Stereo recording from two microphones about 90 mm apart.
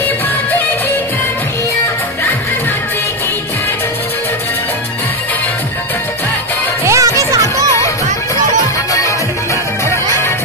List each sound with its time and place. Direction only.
6.8 s music: 35° right (ahead or behind)